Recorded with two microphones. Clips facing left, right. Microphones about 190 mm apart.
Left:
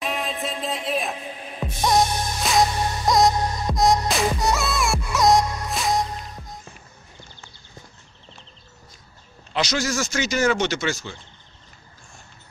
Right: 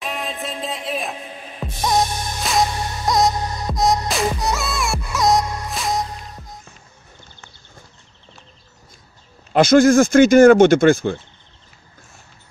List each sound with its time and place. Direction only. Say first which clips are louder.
0.0 s music: even; centre (ahead or behind)
9.5 s speech: right 13 dB; 50° right (ahead or behind)